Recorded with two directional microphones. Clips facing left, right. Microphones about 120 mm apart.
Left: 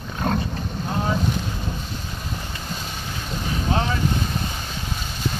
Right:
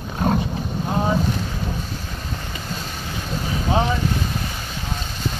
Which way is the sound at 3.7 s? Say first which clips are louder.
Right 4 dB; 15° right (ahead or behind).